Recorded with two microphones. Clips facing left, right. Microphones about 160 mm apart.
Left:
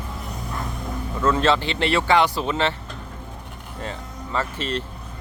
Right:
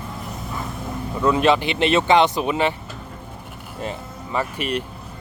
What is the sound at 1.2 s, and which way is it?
Speech, 15° right (ahead or behind).